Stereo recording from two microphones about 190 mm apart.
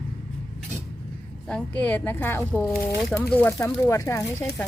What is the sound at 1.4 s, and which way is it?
Speech, 5° left (ahead or behind).